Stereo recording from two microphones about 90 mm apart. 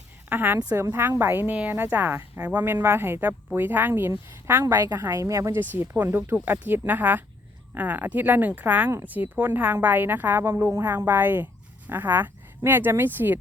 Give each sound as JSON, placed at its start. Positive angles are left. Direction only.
{"t": 0.3, "sound": "a woman's voice", "side_deg": -20}
{"t": 4.6, "sound": "a woman's voice", "side_deg": -45}